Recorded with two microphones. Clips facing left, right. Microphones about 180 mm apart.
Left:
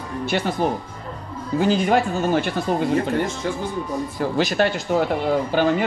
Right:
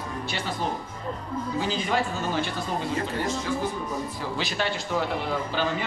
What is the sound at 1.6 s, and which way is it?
Speech, 55° left (ahead or behind).